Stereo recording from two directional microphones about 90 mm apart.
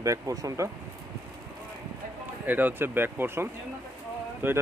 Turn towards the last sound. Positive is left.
turn(degrees=-25)  # may be behind; listen again after turning